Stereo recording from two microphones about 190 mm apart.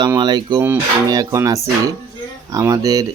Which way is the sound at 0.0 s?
25° right (ahead or behind).